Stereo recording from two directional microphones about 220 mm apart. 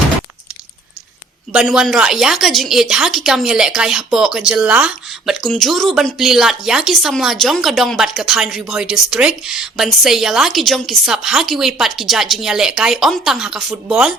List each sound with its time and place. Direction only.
1.5 s a woman's voice: centre (ahead or behind)